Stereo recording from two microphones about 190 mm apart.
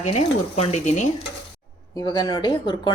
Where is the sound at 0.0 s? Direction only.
35° left (ahead or behind).